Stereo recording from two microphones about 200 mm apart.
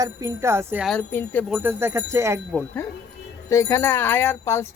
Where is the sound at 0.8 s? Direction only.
10° left (ahead or behind).